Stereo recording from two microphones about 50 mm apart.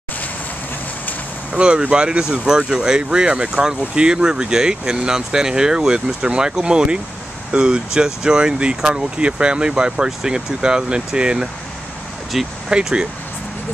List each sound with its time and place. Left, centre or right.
1.5 s speech: right
12.6 s speech: centre